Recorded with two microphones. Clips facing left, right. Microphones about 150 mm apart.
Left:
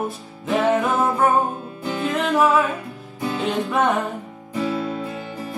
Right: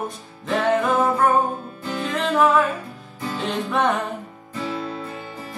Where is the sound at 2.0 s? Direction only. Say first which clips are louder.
Left 1 dB; centre (ahead or behind).